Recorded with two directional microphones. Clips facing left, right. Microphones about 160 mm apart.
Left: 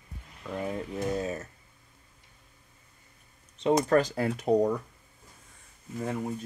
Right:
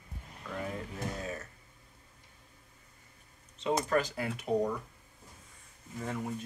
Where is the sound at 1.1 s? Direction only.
25° left (ahead or behind).